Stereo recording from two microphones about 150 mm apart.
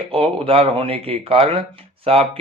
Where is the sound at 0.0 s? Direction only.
40° right (ahead or behind).